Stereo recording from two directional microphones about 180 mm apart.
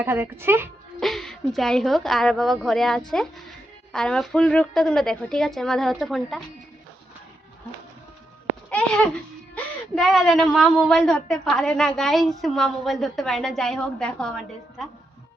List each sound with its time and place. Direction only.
0.0 s speech: 10° right (ahead or behind)
0.9 s a woman's voice: centre (ahead or behind)
8.7 s babbling: 5° left (ahead or behind)
9.6 s a woman's voice: centre (ahead or behind)